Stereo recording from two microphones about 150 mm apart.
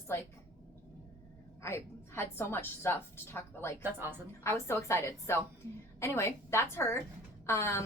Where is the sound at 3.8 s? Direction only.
15° right (ahead or behind).